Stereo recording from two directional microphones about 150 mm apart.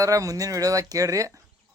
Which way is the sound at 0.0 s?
20° right (ahead or behind).